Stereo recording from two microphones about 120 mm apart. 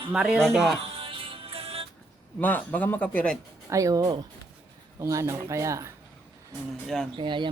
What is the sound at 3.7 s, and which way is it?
Speech, 25° right (ahead or behind).